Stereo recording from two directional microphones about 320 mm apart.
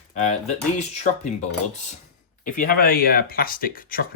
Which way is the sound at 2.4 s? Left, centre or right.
Left.